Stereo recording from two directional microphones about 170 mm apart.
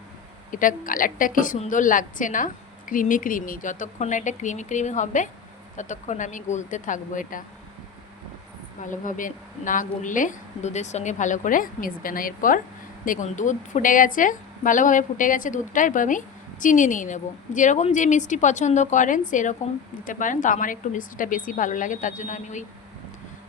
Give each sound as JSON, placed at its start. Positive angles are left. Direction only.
{"t": 0.5, "sound": "a woman's voice", "side_deg": 50}
{"t": 8.8, "sound": "a woman's voice", "side_deg": 50}